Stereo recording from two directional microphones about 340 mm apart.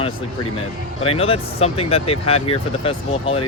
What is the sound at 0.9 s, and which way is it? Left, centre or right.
Speech, centre.